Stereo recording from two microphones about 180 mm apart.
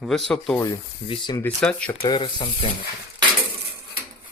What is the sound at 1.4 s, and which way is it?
Speech, 5° left (ahead or behind).